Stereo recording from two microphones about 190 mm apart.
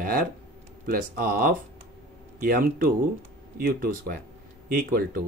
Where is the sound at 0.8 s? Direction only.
50° right (ahead or behind).